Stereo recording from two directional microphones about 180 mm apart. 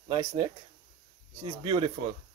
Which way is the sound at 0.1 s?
30° right (ahead or behind).